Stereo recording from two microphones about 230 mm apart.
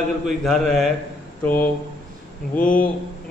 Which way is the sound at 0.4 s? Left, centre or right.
Centre.